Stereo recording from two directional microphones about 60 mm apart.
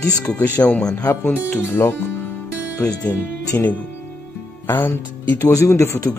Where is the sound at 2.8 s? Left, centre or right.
Left.